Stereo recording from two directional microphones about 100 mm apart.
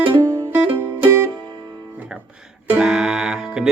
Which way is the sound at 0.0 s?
50° right (ahead or behind).